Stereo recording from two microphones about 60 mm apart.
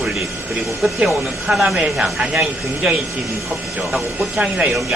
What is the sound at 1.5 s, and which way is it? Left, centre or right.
Speech, centre.